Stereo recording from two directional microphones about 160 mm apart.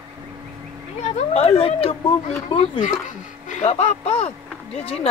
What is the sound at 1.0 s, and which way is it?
A child's voice, 40° left (ahead or behind).